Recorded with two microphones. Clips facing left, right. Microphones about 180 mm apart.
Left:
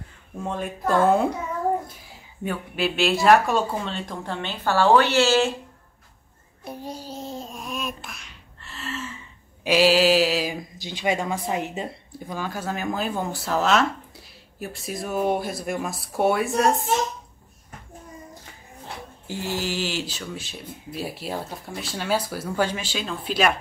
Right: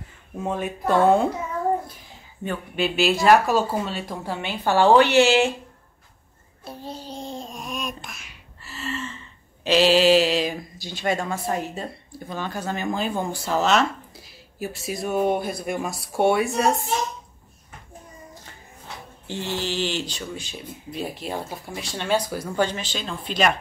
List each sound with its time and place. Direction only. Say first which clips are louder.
0.4 s speech: right 2 dB; 5° right (ahead or behind)
2.4 s speech: even; centre (ahead or behind); by 5.5 s 15° right (ahead or behind)
6.6 s a sound: left 1 dB; 15° left (ahead or behind)
9.6 s mantra: right 1 dB; 10° left (ahead or behind)
10.8 s speech: even; 15° left (ahead or behind); by 16.8 s centre (ahead or behind)
19.2 s speech: even; 5° left (ahead or behind)